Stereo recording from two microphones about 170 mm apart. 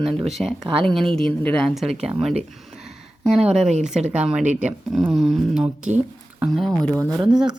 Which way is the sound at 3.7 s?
45° right (ahead or behind).